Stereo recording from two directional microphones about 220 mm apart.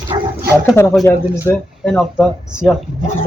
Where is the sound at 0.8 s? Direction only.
10° left (ahead or behind).